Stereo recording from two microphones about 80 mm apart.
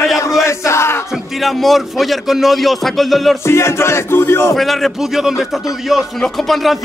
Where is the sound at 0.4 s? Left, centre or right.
Left.